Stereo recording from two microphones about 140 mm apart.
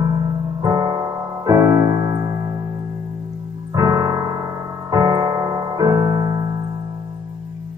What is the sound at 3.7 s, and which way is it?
Piano, 25° right (ahead or behind).